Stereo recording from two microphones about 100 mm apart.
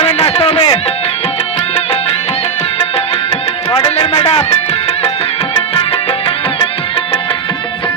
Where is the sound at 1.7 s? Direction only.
85° left.